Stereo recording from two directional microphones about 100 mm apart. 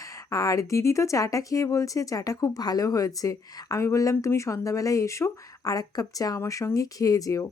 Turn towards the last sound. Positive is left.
turn(degrees=35)  # may be behind; listen again after turning